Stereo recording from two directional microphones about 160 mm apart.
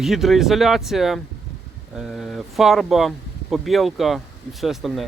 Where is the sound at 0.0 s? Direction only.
Centre (ahead or behind).